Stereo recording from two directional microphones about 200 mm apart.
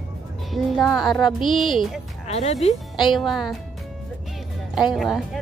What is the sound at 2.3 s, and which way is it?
Speech, 35° left (ahead or behind).